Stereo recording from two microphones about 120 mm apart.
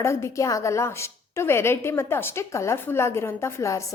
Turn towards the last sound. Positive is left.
turn(degrees=25)  # may be behind; listen again after turning